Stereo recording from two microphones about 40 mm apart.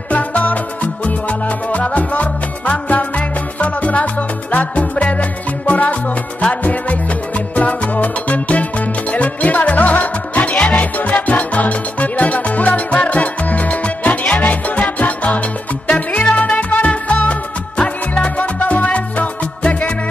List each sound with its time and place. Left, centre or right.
0.1 s music: left